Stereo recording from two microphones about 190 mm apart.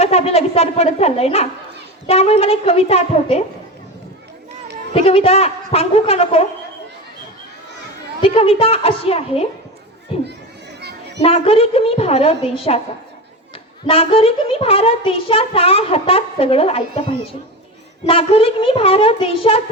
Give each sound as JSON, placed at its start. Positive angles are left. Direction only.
{"t": 0.0, "sound": "a woman's voice", "side_deg": 35}
{"t": 4.9, "sound": "a woman's voice", "side_deg": 30}
{"t": 8.2, "sound": "a woman's voice", "side_deg": 30}
{"t": 10.8, "sound": "a sound", "side_deg": -60}
{"t": 11.2, "sound": "a woman's voice", "side_deg": 30}
{"t": 13.8, "sound": "a child's voice", "side_deg": 30}